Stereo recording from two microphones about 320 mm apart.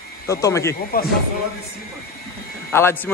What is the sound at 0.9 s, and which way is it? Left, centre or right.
Speech, left.